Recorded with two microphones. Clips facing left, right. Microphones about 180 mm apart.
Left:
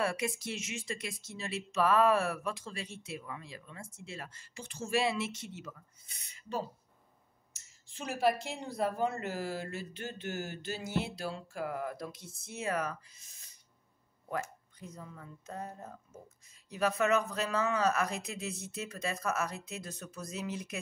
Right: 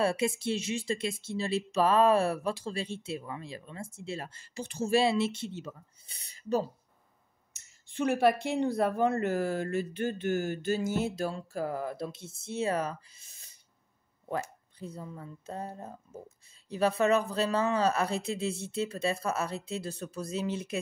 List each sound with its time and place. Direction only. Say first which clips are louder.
0.0 s speech: right 5 dB; 30° right (ahead or behind)
7.9 s speech: right 5 dB; 60° right (ahead or behind); by 20.8 s 30° right (ahead or behind)